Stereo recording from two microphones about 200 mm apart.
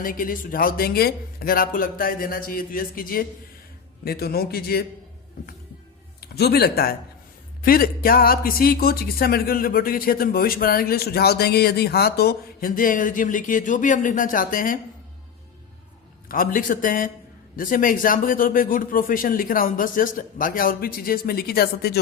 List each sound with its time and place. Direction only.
0.0 s speech: 45° left (ahead or behind)
6.1 s speech: 55° left (ahead or behind)
16.3 s speech: 45° left (ahead or behind)